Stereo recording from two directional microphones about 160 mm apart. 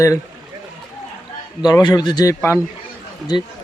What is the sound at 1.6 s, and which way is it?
Speech, 25° left (ahead or behind).